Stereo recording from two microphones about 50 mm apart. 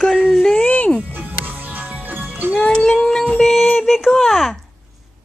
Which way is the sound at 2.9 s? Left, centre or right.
Centre.